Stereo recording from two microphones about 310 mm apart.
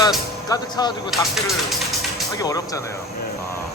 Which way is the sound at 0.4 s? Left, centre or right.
Centre.